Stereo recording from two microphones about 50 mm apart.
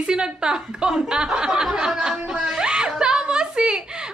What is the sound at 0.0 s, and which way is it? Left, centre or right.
A woman's voice, centre.